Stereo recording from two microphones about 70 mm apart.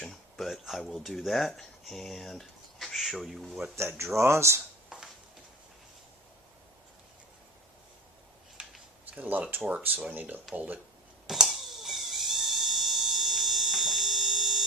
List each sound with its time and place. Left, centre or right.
0.0 s speech: centre
3.8 s speech: right
9.0 s speech: right
11.3 s a sound: centre